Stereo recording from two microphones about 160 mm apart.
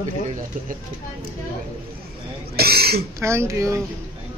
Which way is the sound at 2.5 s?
75° right (ahead or behind).